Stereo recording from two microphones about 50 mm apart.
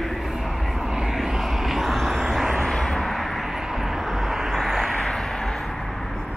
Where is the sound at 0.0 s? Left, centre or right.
Centre.